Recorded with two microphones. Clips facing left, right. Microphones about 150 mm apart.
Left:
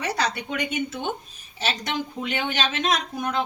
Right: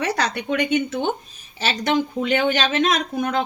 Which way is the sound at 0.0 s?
70° right (ahead or behind).